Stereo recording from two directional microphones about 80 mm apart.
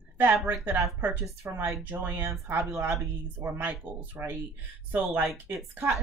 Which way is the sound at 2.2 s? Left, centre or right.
Right.